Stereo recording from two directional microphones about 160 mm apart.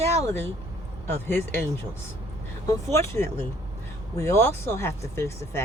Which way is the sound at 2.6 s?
20° left (ahead or behind).